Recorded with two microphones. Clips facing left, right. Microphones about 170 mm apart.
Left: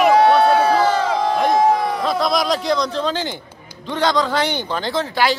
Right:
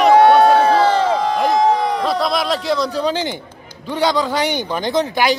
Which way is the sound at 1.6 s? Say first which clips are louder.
Right 1 dB; centre (ahead or behind).